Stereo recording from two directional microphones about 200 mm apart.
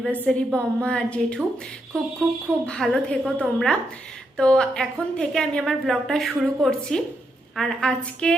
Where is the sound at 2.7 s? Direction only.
5° left (ahead or behind).